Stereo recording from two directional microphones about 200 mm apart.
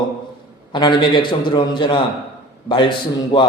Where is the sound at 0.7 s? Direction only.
25° left (ahead or behind).